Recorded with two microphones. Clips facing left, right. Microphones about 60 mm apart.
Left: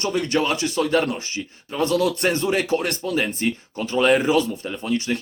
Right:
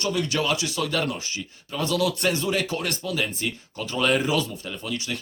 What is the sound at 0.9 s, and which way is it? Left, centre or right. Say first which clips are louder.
Speech: left 5 dB; left.